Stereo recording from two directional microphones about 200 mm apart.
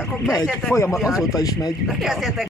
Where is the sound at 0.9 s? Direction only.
Centre (ahead or behind).